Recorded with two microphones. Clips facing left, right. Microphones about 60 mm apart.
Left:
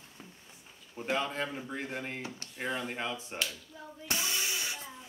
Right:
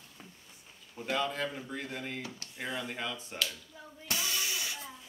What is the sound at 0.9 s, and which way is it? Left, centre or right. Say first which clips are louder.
Speech: even; left.